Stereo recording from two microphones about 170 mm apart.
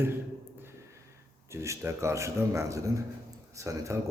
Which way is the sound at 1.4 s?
15° right (ahead or behind).